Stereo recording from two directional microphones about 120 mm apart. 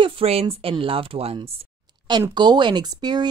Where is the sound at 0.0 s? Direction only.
50° right (ahead or behind).